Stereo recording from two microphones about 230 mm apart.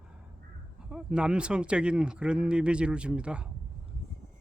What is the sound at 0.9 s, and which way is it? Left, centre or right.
Speech, centre.